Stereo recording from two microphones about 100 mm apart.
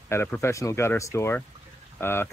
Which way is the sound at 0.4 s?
30° left (ahead or behind).